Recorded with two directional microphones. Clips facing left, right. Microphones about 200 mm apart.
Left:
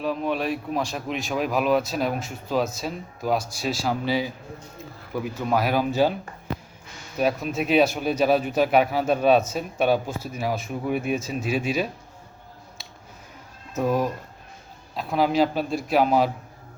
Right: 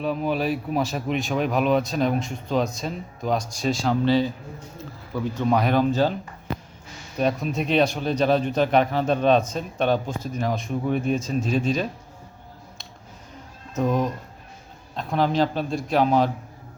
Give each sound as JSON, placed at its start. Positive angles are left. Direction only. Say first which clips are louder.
{"t": 0.0, "sound": "speech", "louder": "right 1 dB", "side_deg": 0}
{"t": 7.2, "sound": "speech", "louder": "even", "side_deg": 5}
{"t": 13.7, "sound": "speech", "louder": "even", "side_deg": 5}